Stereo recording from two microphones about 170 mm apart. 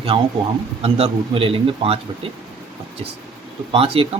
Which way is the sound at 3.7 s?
30° right (ahead or behind).